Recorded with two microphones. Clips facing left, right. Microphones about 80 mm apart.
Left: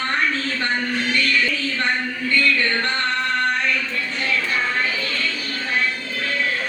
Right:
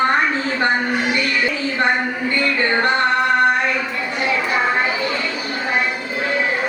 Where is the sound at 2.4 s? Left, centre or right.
Right.